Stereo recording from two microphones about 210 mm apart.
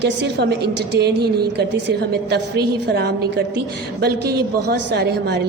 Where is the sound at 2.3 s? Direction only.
50° right (ahead or behind).